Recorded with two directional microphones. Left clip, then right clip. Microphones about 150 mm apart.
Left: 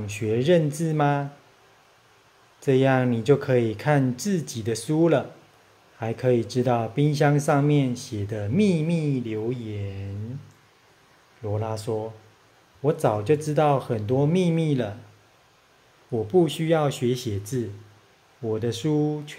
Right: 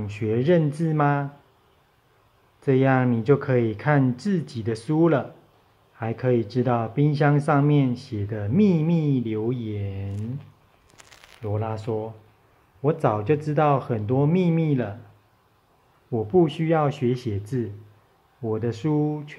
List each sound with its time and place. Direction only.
0.0 s speech: 5° left (ahead or behind)
2.6 s speech: 10° left (ahead or behind); by 10.0 s 10° right (ahead or behind)
11.4 s speech: 5° left (ahead or behind)
13.0 s speech: 5° left (ahead or behind)
16.1 s speech: 5° left (ahead or behind)